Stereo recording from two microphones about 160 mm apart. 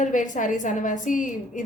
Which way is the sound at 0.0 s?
50° left (ahead or behind).